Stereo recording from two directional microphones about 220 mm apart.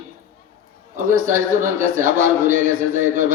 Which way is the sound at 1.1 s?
35° right (ahead or behind).